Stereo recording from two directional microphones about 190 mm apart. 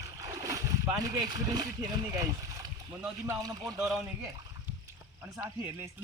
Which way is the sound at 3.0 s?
5° right (ahead or behind).